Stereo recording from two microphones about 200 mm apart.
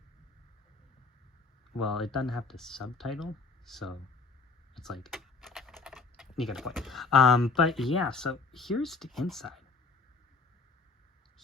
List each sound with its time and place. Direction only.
1.8 s speech: centre (ahead or behind)